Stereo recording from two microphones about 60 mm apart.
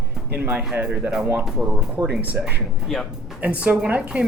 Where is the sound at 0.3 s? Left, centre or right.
Right.